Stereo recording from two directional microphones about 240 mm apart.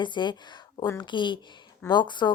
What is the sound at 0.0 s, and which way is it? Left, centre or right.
Speech, centre.